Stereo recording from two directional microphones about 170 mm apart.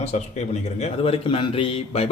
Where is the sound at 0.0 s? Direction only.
40° left (ahead or behind).